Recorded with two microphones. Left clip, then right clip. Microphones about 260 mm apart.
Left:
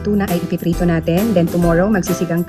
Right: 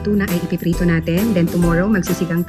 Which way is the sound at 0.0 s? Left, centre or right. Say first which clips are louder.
Left 1 dB; centre.